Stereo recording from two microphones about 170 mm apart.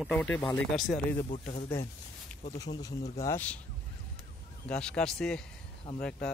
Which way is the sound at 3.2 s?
10° left (ahead or behind).